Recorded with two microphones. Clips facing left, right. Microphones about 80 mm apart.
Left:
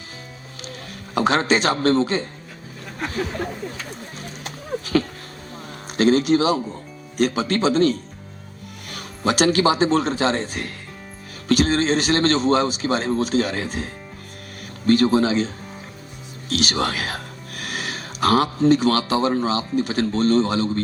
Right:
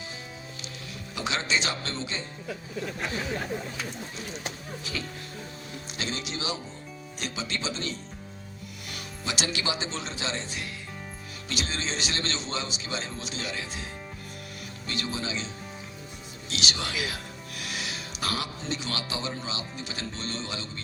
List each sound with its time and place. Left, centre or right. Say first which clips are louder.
1.1 s a man's voice: left 11 dB; left
4.2 s a sound: left 2 dB; left
6.0 s a man's voice: left 18 dB; left